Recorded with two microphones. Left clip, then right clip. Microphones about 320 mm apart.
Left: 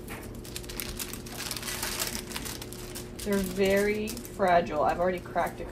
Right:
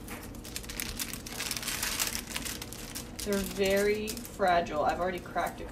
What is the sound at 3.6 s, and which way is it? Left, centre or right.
Speech, centre.